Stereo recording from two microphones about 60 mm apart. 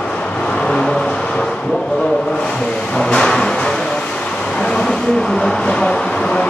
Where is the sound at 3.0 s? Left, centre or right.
Centre.